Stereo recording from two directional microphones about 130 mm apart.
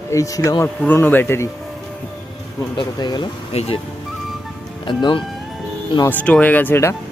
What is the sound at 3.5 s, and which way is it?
Speech, 55° left (ahead or behind).